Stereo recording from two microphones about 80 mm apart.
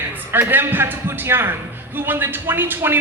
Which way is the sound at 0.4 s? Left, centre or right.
Right.